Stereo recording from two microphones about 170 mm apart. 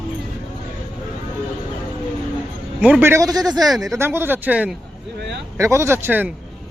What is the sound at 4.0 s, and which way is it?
A man's voice, 15° right (ahead or behind).